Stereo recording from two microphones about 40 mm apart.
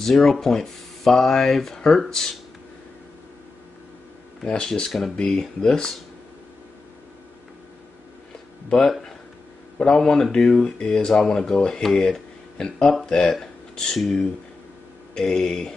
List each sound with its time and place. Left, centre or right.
0.0 s speech: centre
4.6 s speech: centre
8.6 s speech: centre
9.9 s speech: centre
13.3 s a sound: centre
15.1 s speech: centre